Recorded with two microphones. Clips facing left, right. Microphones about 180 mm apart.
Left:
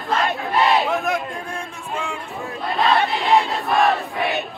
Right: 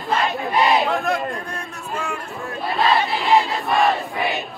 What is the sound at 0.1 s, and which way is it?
Battle cry, centre (ahead or behind).